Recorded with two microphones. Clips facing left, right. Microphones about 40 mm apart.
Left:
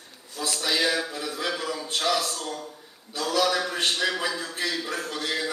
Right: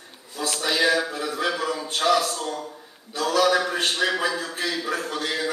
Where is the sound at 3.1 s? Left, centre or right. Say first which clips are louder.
Right 4 dB; centre.